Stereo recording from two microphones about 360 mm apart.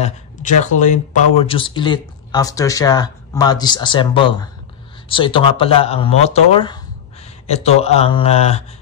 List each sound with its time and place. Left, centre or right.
0.0 s speech: centre